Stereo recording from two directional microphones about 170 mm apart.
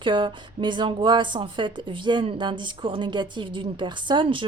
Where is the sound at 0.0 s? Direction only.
30° right (ahead or behind).